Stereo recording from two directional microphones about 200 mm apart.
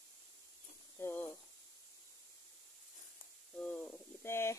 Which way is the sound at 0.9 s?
10° left (ahead or behind).